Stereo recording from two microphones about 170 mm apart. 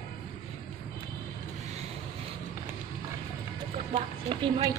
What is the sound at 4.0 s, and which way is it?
Run, 30° right (ahead or behind).